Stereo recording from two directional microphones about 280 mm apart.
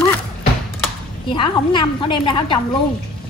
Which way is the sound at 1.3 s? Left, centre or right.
Centre.